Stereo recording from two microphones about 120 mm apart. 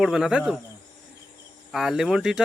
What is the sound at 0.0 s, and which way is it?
Speech, 5° right (ahead or behind).